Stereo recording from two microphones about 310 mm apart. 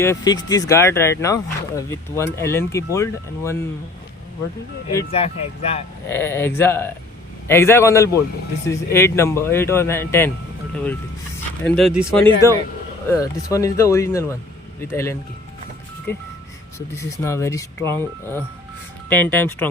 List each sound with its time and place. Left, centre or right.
0.0 s speech: centre
4.9 s speech: centre
6.1 s speech: centre
11.6 s speech: centre
16.7 s speech: centre